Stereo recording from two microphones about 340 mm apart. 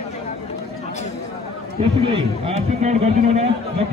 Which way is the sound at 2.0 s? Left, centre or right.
Centre.